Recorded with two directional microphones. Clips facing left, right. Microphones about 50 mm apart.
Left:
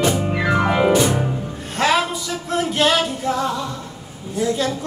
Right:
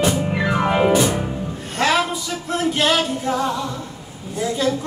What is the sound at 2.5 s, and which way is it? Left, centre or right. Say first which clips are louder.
Music: left 1 dB; centre.